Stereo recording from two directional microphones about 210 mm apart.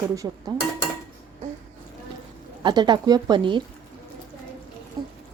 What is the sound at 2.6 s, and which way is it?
Speech, 20° right (ahead or behind).